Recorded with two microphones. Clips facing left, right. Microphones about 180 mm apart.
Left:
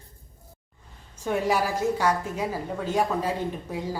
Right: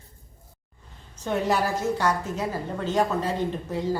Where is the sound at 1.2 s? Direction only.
10° left (ahead or behind).